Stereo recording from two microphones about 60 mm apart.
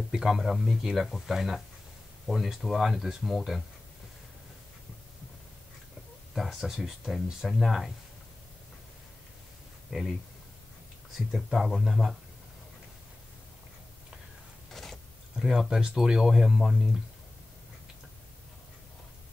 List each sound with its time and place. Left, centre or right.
0.1 s speech: centre
6.3 s speech: centre
9.8 s speech: centre
11.1 s speech: centre
14.7 s a sound: centre
15.3 s speech: centre